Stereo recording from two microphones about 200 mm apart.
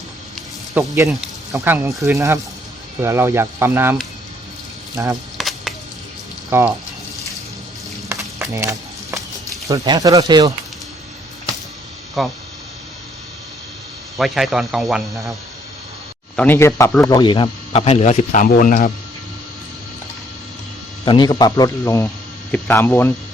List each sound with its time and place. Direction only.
0.8 s speech: 10° right (ahead or behind)
5.0 s speech: 15° right (ahead or behind)
5.4 s a sound: centre (ahead or behind)
6.5 s speech: 10° right (ahead or behind)
8.4 s a sound: 15° right (ahead or behind)
9.6 s speech: 20° right (ahead or behind)
12.2 s speech: centre (ahead or behind)
14.2 s speech: centre (ahead or behind)
16.3 s speech: 10° left (ahead or behind); by 18.9 s 45° left (ahead or behind)
21.0 s speech: 20° left (ahead or behind)